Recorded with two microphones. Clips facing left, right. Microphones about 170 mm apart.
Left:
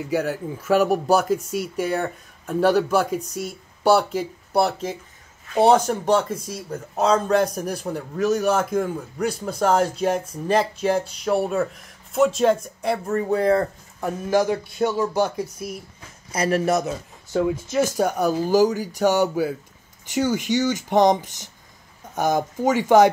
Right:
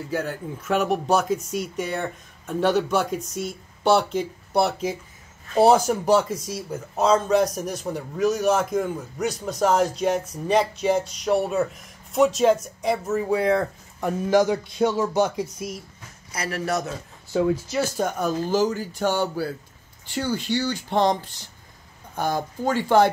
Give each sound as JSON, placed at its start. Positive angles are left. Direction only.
{"t": 0.0, "sound": "a man's voice", "side_deg": 10}
{"t": 14.0, "sound": "speech", "side_deg": -20}
{"t": 16.4, "sound": "speech", "side_deg": 20}